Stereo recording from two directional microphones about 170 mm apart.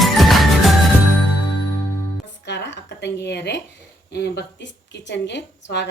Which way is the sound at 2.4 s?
90° left.